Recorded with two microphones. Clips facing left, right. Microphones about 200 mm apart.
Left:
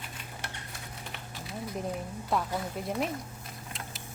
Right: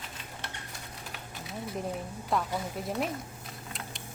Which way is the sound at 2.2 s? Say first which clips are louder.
Even; centre (ahead or behind).